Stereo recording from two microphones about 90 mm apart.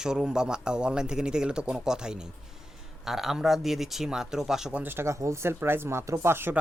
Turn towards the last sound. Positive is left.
turn(degrees=-30)  # may be behind; listen again after turning